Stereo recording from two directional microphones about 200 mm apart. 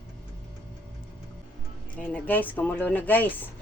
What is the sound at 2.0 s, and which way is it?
Speech, 5° left (ahead or behind).